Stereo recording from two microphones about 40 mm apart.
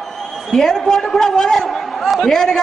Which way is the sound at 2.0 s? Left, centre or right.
Centre.